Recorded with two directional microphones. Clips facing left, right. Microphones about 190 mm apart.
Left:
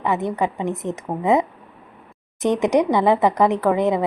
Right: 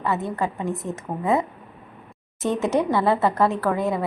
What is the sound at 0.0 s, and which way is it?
A woman's voice, 15° left (ahead or behind).